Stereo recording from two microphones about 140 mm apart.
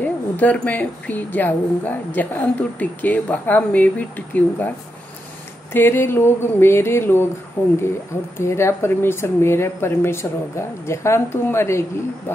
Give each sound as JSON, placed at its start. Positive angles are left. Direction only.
{"t": 0.0, "sound": "a woman's voice", "side_deg": 10}
{"t": 5.7, "sound": "a woman's voice", "side_deg": 15}